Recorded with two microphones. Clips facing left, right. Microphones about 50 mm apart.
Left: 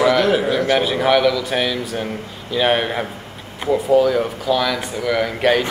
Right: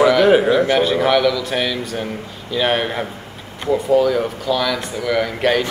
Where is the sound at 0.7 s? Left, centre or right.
Centre.